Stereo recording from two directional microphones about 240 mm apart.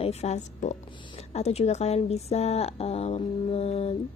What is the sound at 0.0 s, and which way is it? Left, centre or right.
A woman's voice, left.